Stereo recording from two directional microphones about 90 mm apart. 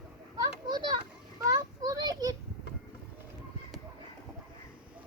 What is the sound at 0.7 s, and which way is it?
Children playing, 50° right (ahead or behind).